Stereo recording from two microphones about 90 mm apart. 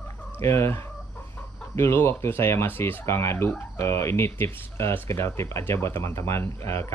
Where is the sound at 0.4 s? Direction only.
30° left (ahead or behind).